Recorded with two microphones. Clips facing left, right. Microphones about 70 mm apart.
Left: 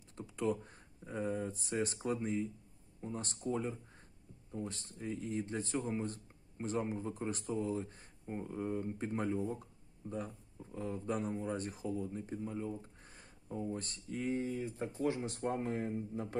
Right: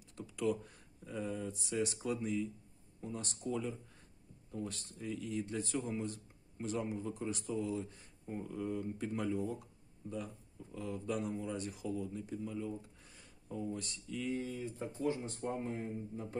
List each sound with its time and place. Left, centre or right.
0.1 s speech: left
15.0 s speech: left